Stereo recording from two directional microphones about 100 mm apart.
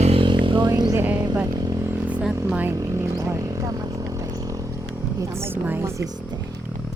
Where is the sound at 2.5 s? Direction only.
15° right (ahead or behind).